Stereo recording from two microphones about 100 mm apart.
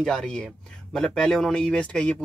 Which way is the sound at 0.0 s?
5° left (ahead or behind).